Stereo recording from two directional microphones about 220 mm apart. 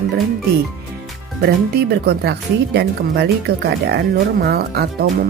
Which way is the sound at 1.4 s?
50° right (ahead or behind).